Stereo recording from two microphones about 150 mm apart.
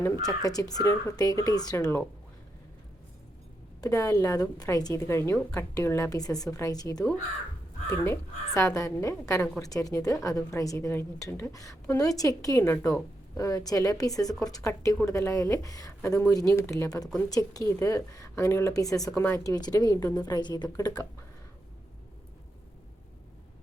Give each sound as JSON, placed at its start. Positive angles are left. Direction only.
{"t": 0.3, "sound": "a woman's voice", "side_deg": 25}
{"t": 3.8, "sound": "a woman's voice", "side_deg": 20}